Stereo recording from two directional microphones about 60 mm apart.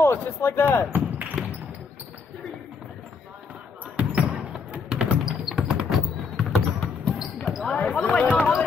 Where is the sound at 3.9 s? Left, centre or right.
Right.